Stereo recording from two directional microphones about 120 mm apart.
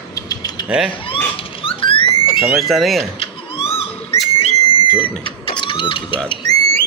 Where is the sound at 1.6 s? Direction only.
45° left (ahead or behind).